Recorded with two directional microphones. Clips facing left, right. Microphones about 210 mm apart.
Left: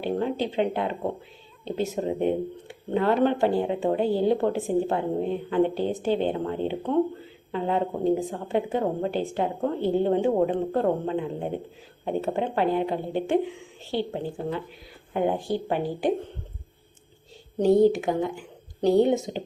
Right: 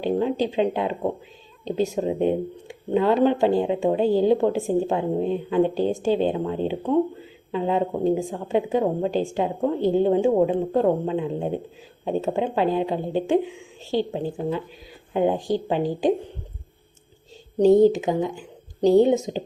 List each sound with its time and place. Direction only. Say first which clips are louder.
0.0 s speech: right 4 dB; 15° right (ahead or behind)
18.0 s speech: right 2 dB; 15° right (ahead or behind)